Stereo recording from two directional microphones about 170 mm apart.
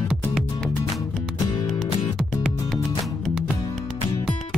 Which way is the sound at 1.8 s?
Centre (ahead or behind).